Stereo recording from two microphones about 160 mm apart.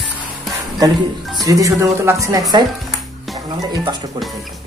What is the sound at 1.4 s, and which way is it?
Speech, 20° right (ahead or behind).